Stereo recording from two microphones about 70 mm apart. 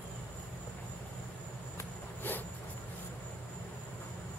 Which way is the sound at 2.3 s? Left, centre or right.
Left.